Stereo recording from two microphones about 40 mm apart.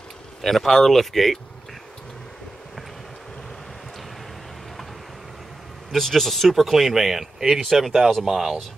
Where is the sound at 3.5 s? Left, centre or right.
Centre.